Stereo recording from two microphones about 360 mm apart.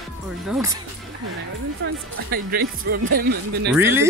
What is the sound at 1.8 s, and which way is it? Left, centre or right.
Speech, right.